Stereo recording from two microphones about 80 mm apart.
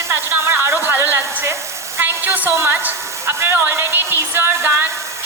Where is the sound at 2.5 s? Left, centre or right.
Right.